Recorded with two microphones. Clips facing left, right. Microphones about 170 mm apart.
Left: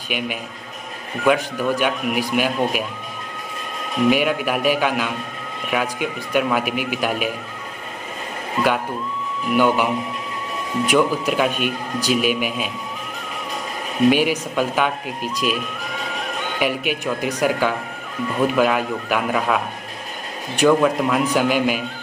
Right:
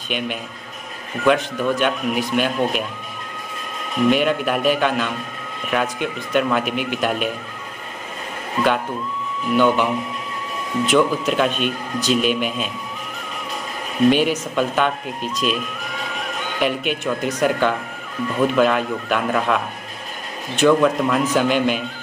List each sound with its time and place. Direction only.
0.1 s speech: 10° left (ahead or behind)
4.1 s speech: 5° left (ahead or behind)
9.5 s speech: 10° left (ahead or behind)
10.9 s speech: 10° left (ahead or behind)
14.1 s a man's voice: 10° left (ahead or behind)